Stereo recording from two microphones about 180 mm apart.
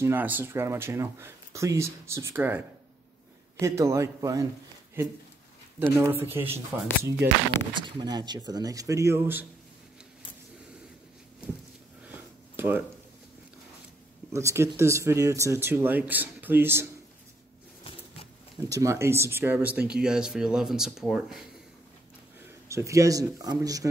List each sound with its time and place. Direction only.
0.0 s speech: 10° right (ahead or behind)
3.6 s speech: 15° right (ahead or behind)
7.7 s speech: 25° right (ahead or behind)
12.1 s a sound: 10° right (ahead or behind)
14.3 s speech: 15° right (ahead or behind)
18.7 s speech: 15° right (ahead or behind); by 21.5 s centre (ahead or behind)
22.7 s speech: 15° right (ahead or behind)